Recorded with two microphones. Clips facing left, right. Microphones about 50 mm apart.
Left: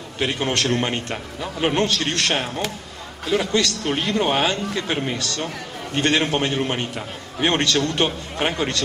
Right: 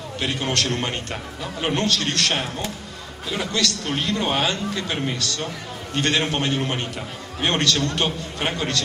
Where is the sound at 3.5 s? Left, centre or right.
Left.